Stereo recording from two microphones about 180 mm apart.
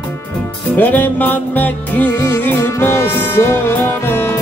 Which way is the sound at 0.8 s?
10° left (ahead or behind).